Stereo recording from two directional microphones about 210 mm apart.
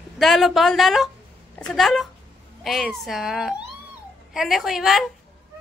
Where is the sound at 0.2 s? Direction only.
Centre (ahead or behind).